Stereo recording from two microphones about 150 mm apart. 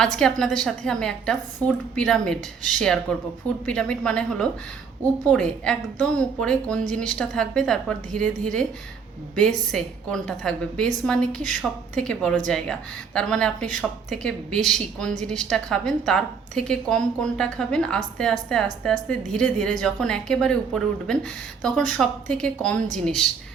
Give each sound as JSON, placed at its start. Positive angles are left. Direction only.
{"t": 0.0, "sound": "a woman's voice", "side_deg": 5}